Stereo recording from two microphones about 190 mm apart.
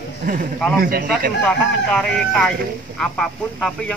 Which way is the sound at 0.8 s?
50° right (ahead or behind).